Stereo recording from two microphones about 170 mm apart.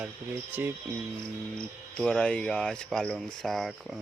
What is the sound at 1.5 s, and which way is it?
Speech, 5° left (ahead or behind).